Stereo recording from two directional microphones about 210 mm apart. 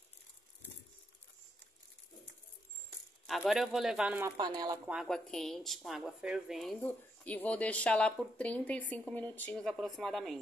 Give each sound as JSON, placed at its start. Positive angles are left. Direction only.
{"t": 3.3, "sound": "a woman's voice", "side_deg": 0}
{"t": 4.4, "sound": "speech", "side_deg": -20}
{"t": 4.8, "sound": "a woman's voice", "side_deg": 0}